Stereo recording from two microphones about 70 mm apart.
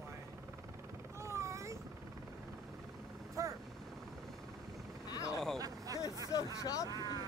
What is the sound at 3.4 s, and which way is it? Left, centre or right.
Vehicle, right.